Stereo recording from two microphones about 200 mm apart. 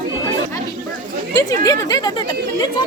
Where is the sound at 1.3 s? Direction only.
15° left (ahead or behind).